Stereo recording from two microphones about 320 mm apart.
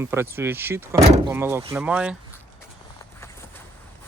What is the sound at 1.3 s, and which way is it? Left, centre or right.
Speech, centre.